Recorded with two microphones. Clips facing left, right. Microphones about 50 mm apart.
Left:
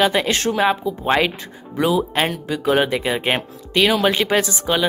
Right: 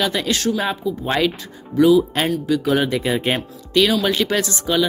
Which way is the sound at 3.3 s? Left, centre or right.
Left.